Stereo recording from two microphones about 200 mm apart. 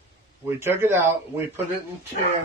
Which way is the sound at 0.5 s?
10° right (ahead or behind).